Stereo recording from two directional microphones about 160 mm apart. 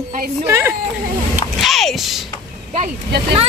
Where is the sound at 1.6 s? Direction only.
Centre (ahead or behind).